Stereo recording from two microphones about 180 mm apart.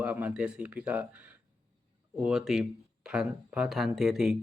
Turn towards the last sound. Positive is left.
turn(degrees=0)  # may be behind; listen again after turning